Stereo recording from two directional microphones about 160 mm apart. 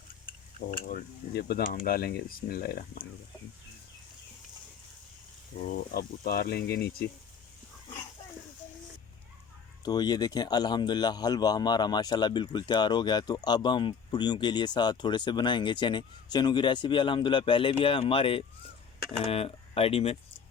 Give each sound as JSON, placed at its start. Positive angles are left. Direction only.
{"t": 0.3, "sound": "speech", "side_deg": 60}
{"t": 5.5, "sound": "speech", "side_deg": 85}
{"t": 9.8, "sound": "speech", "side_deg": 25}